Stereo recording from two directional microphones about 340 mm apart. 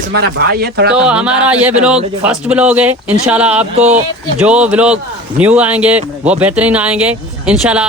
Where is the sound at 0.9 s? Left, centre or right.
Centre.